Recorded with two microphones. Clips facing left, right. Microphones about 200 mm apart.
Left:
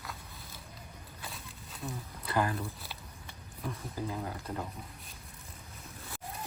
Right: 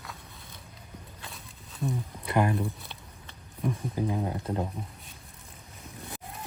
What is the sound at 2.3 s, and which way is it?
Speech, 20° right (ahead or behind).